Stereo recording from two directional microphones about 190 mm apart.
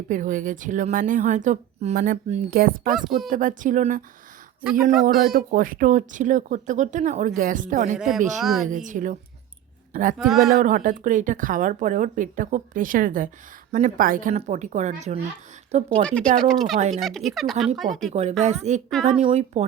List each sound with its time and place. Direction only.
0.1 s speech: 45° right (ahead or behind)
2.9 s speech: centre (ahead or behind)
3.2 s speech: 45° right (ahead or behind)
4.6 s speech: 5° right (ahead or behind)
5.5 s speech: 45° right (ahead or behind)
7.9 s speech: centre (ahead or behind)
8.6 s speech: 40° right (ahead or behind)
10.2 s speech: centre (ahead or behind)
10.6 s speech: 45° right (ahead or behind)
16.0 s speech: 5° left (ahead or behind)
18.1 s speech: 35° right (ahead or behind)